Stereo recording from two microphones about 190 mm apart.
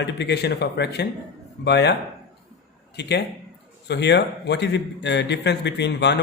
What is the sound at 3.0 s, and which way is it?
A man's voice, 60° left (ahead or behind).